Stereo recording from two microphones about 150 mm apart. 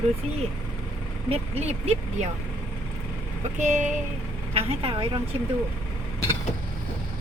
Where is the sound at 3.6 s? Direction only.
55° right (ahead or behind).